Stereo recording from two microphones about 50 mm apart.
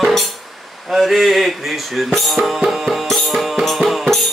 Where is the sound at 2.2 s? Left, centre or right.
Centre.